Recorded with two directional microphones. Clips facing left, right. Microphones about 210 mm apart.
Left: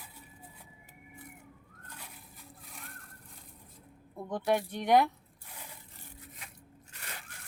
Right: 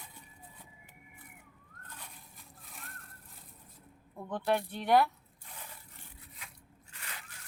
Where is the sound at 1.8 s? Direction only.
10° left (ahead or behind).